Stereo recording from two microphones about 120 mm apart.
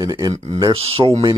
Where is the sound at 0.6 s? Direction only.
50° right (ahead or behind).